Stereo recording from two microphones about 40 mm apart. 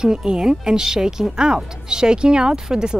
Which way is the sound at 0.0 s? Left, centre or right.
Centre.